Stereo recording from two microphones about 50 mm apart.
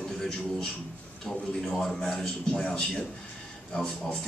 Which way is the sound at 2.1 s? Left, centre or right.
Centre.